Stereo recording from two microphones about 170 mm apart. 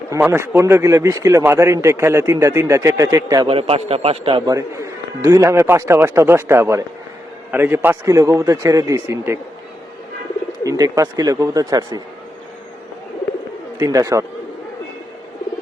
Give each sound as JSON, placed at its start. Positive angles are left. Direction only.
{"t": 0.1, "sound": "a man's voice", "side_deg": -15}
{"t": 3.4, "sound": "a man's voice", "side_deg": -35}
{"t": 4.5, "sound": "a man's voice", "side_deg": -20}
{"t": 10.6, "sound": "speech", "side_deg": -20}
{"t": 13.7, "sound": "speech", "side_deg": -20}